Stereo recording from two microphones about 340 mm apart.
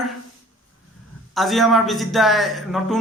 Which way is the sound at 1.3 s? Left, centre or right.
Centre.